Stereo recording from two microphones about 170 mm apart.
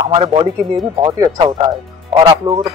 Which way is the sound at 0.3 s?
25° right (ahead or behind).